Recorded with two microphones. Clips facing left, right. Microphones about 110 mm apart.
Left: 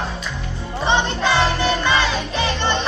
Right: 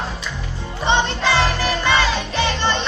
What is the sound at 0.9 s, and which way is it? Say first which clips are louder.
Music: even; 30° right (ahead or behind).